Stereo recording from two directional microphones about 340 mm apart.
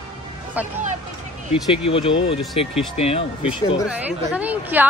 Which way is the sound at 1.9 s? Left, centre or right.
Centre.